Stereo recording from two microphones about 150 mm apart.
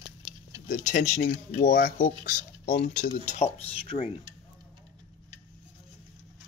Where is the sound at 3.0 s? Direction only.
50° left (ahead or behind).